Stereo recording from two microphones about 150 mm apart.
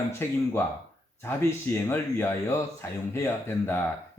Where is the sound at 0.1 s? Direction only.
15° left (ahead or behind).